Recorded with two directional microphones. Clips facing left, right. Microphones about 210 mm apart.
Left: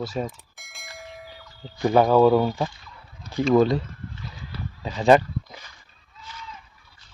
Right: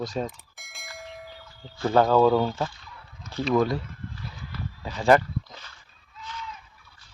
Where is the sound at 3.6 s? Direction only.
25° left (ahead or behind).